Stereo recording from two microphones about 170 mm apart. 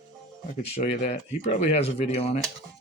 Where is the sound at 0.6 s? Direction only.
40° left (ahead or behind).